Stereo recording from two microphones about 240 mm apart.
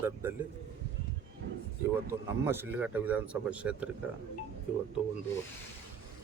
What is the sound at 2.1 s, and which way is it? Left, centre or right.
A man's voice, centre.